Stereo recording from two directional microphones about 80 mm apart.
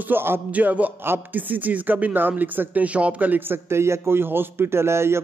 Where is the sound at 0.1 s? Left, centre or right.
Right.